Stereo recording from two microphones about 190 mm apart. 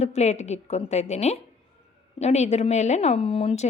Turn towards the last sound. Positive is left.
turn(degrees=30)  # may be behind; listen again after turning